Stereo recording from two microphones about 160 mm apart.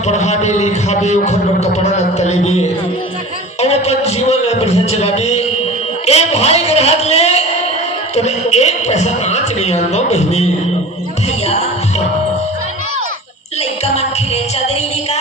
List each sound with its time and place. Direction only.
0.1 s a sound: 45° left (ahead or behind)
3.6 s music: 40° left (ahead or behind)
6.1 s a sound: 40° left (ahead or behind)
8.1 s a man's voice: 45° left (ahead or behind)
11.4 s music: 40° left (ahead or behind)
13.6 s music: 40° left (ahead or behind)